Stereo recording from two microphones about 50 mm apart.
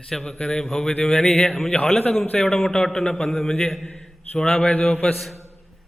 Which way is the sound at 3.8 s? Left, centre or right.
Centre.